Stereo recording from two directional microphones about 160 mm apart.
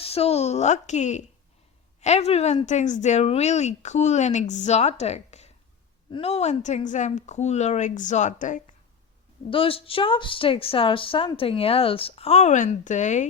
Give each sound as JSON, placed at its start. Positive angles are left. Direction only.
{"t": 0.0, "sound": "a woman's voice", "side_deg": 40}
{"t": 9.5, "sound": "speech", "side_deg": 35}